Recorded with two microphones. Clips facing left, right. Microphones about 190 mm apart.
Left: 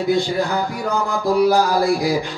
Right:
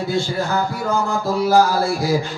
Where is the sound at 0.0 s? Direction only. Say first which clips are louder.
Left 3 dB; 15° left (ahead or behind).